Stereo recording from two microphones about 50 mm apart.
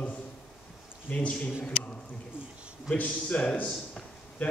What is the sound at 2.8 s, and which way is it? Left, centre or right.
Speech, left.